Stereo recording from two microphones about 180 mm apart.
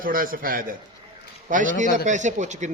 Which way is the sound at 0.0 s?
50° right (ahead or behind).